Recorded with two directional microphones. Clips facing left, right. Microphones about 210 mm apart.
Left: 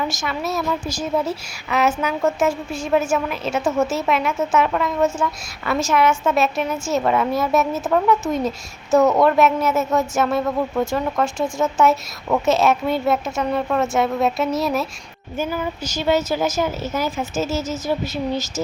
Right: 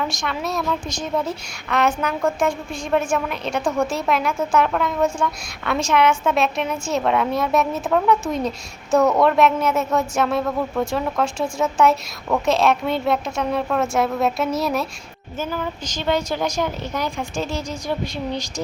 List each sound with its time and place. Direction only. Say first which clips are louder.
0.0 s a woman's voice: left 1 dB; 5° left (ahead or behind)
15.4 s a woman's voice: left 2 dB; 10° left (ahead or behind)